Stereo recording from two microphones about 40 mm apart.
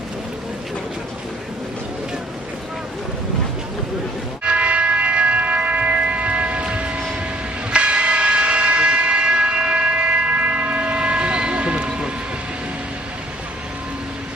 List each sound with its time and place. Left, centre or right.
4.4 s church bell: right
7.7 s train: right